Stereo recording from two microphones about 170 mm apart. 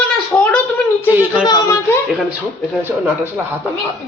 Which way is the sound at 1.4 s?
25° left (ahead or behind).